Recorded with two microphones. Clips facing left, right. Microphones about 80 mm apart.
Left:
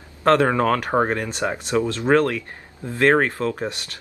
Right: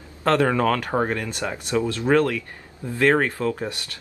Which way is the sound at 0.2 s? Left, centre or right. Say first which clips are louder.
Left 2 dB; left.